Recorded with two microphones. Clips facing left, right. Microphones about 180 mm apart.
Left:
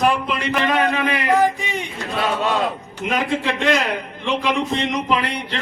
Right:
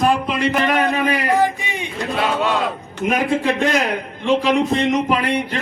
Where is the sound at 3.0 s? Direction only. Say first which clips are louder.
Right 3 dB; 50° right (ahead or behind).